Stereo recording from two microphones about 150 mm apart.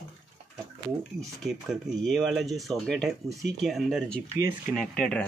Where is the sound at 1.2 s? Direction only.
Centre (ahead or behind).